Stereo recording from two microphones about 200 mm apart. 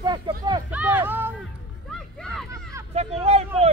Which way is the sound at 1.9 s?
Centre (ahead or behind).